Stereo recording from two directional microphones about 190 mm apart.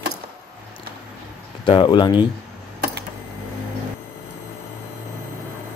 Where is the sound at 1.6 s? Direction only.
25° left (ahead or behind).